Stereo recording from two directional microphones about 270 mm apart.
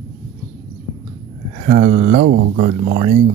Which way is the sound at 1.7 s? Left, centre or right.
Right.